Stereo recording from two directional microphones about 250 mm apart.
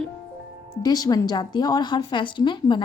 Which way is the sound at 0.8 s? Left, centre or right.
Centre.